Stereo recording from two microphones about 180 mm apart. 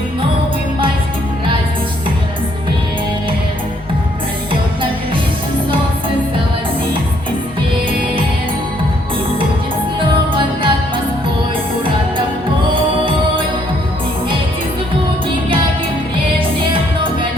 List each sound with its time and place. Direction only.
10.3 s music: 30° right (ahead or behind)